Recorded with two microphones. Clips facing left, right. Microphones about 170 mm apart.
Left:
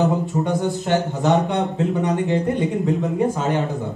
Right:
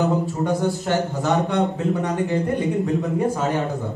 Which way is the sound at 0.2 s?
20° left (ahead or behind).